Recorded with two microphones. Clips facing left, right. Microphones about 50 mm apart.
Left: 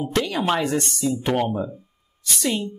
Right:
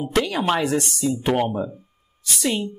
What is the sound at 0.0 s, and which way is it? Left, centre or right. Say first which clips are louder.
Speech: right 1 dB; centre.